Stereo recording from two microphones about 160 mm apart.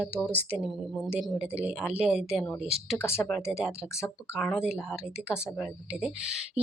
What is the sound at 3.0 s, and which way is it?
Speech, 15° left (ahead or behind).